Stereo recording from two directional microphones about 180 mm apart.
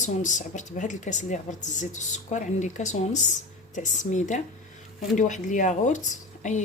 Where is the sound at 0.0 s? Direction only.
45° left (ahead or behind).